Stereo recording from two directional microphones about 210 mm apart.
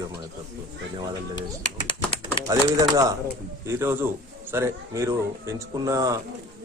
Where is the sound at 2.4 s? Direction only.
15° right (ahead or behind).